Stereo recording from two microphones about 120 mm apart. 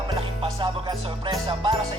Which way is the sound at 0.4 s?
35° right (ahead or behind).